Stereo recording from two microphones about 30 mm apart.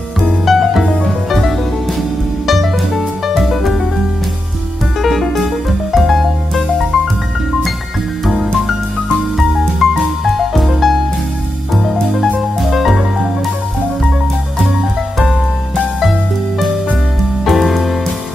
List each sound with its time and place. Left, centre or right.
0.5 s music: centre
2.4 s music: centre
5.0 s music: centre
9.6 s music: centre
16.0 s music: centre